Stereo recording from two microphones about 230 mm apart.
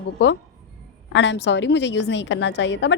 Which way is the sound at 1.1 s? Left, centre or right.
Left.